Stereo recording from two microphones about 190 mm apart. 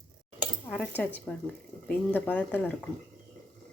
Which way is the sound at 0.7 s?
5° left (ahead or behind).